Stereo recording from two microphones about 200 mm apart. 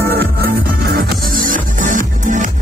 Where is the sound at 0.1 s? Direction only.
50° right (ahead or behind).